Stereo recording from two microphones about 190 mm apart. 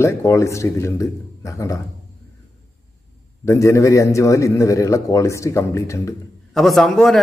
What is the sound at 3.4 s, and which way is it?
A man's voice, 15° left (ahead or behind).